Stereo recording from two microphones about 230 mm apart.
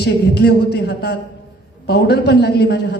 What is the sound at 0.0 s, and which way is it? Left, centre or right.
A woman's voice, left.